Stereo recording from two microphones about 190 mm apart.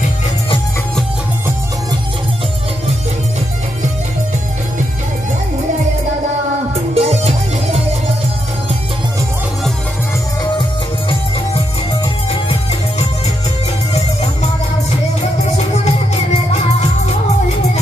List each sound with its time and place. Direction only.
6.9 s music: 35° right (ahead or behind)
13.9 s music: 35° left (ahead or behind)